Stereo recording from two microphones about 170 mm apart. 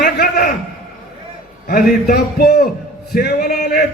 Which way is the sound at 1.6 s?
65° left (ahead or behind).